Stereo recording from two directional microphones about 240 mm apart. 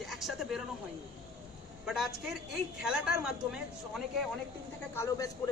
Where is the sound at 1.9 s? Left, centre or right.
Centre.